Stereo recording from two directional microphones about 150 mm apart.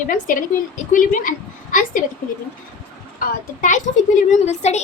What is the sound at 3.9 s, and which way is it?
Speech, 55° left (ahead or behind).